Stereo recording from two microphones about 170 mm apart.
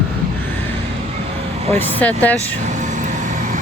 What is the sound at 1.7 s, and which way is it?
Speech, 10° left (ahead or behind).